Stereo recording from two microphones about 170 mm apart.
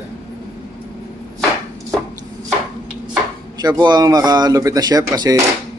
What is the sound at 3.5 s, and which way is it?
Speech, 25° right (ahead or behind).